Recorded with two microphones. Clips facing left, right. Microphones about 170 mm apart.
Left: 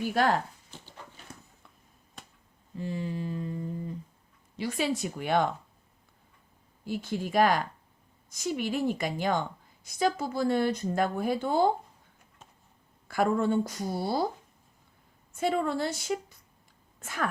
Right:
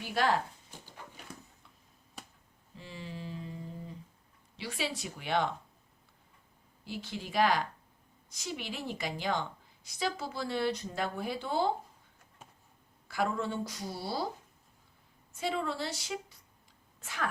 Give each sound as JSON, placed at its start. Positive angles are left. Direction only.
{"t": 0.0, "sound": "a woman's voice", "side_deg": 50}
{"t": 0.9, "sound": "horse", "side_deg": -15}
{"t": 2.7, "sound": "mantra", "side_deg": 50}
{"t": 4.5, "sound": "a woman's voice", "side_deg": 45}
{"t": 6.8, "sound": "a woman's voice", "side_deg": 50}
{"t": 13.1, "sound": "a woman's voice", "side_deg": 50}
{"t": 15.4, "sound": "a woman's voice", "side_deg": 50}